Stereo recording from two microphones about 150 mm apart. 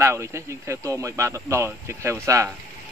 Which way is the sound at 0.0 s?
20° right (ahead or behind).